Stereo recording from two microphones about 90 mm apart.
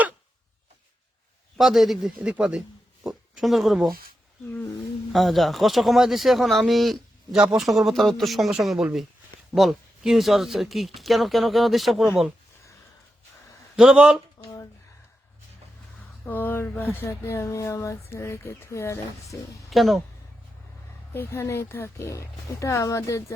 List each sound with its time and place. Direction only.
1.5 s speech: centre (ahead or behind)
5.1 s speech: centre (ahead or behind)
13.7 s speech: 10° right (ahead or behind)
16.2 s speech: 20° left (ahead or behind)
19.7 s speech: centre (ahead or behind)
21.1 s speech: 25° left (ahead or behind)